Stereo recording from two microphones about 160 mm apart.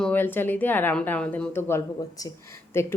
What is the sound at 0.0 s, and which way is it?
A woman's voice, 10° left (ahead or behind).